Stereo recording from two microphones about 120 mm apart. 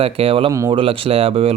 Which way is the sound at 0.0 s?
50° right (ahead or behind).